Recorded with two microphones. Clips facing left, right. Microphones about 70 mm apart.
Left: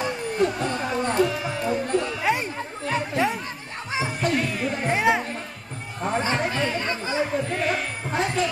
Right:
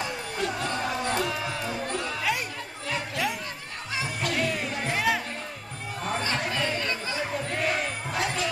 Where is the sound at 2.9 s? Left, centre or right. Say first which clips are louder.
Left 6 dB; left.